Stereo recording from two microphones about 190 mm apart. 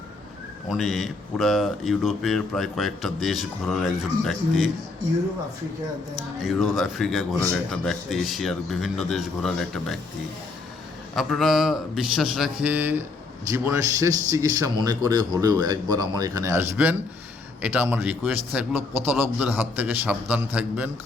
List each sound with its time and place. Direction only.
0.7 s speech: centre (ahead or behind)
6.4 s speech: centre (ahead or behind)
11.1 s a man's voice: centre (ahead or behind)